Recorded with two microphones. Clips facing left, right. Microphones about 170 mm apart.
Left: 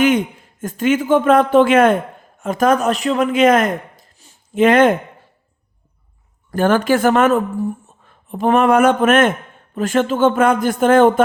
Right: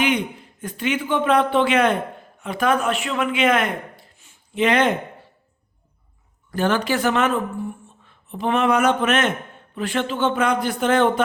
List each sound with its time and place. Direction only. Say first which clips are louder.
0.0 s a man's voice: left 6 dB; 45° left (ahead or behind)
6.5 s a woman's voice: left 6 dB; 50° left (ahead or behind)